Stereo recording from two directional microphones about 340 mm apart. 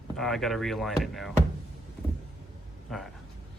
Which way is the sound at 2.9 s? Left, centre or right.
Centre.